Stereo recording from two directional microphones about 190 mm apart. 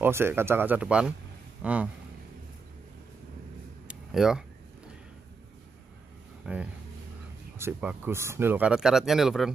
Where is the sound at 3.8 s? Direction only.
5° right (ahead or behind).